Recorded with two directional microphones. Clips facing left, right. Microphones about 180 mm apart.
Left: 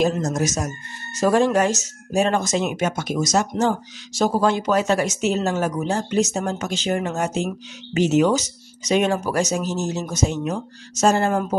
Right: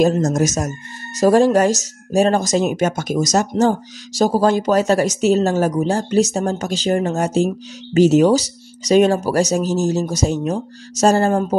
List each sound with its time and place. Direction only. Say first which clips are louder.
0.0 s speech: right 5 dB; 40° right (ahead or behind)